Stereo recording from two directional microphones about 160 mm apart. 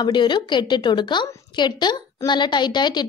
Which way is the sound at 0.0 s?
30° left (ahead or behind).